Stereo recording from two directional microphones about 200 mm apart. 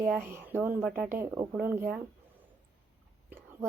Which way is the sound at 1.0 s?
10° right (ahead or behind).